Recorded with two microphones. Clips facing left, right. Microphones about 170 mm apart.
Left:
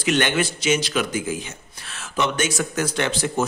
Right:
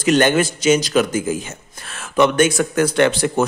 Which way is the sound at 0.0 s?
45° right (ahead or behind).